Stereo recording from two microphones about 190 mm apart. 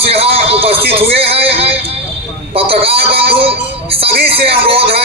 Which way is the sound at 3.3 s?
30° right (ahead or behind).